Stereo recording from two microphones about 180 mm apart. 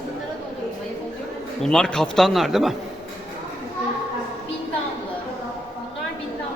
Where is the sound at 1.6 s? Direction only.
5° left (ahead or behind).